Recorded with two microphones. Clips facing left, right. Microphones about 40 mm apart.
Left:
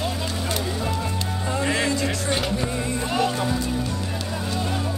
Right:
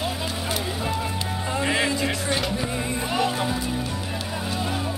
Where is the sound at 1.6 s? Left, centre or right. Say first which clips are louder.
Even; centre.